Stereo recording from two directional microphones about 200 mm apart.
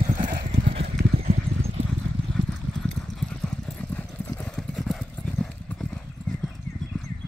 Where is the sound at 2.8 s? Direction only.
5° left (ahead or behind).